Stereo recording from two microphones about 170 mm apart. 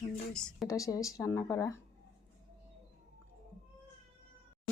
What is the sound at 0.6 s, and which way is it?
Speech, 20° left (ahead or behind).